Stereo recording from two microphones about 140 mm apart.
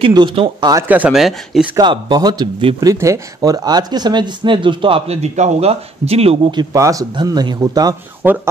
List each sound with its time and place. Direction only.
0.0 s speech: 35° right (ahead or behind)
0.8 s speech: 10° right (ahead or behind)
1.8 s speech: 30° right (ahead or behind); by 6.5 s 45° right (ahead or behind)
6.5 s speech: 25° right (ahead or behind)
8.2 s speech: 15° right (ahead or behind)